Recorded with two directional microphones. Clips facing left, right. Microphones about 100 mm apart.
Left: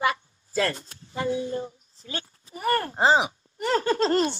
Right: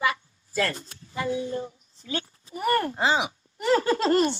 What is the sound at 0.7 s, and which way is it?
Speech, 30° left (ahead or behind).